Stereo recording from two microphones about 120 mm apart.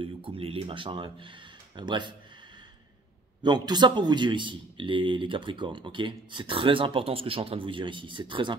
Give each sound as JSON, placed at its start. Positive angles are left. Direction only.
{"t": 0.0, "sound": "a man's voice", "side_deg": -50}
{"t": 3.4, "sound": "a man's voice", "side_deg": -35}